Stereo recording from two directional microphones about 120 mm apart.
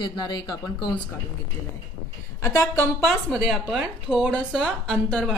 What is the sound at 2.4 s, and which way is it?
Speech, 25° left (ahead or behind).